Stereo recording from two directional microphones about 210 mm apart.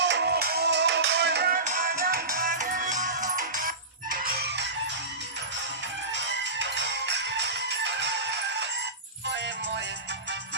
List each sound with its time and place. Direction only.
0.0 s music: 55° right (ahead or behind)
4.1 s a sound: 45° right (ahead or behind)
6.1 s music: 60° right (ahead or behind)